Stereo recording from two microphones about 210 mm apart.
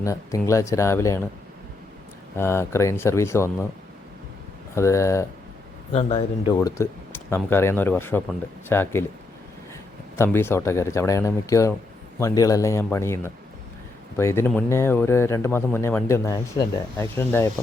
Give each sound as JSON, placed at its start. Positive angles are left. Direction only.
{"t": 0.0, "sound": "a man's voice", "side_deg": 15}
{"t": 2.3, "sound": "a man's voice", "side_deg": 10}
{"t": 4.7, "sound": "a man's voice", "side_deg": 15}
{"t": 5.9, "sound": "a man's voice", "side_deg": 30}
{"t": 6.6, "sound": "a man's voice", "side_deg": 15}
{"t": 10.2, "sound": "a man's voice", "side_deg": 10}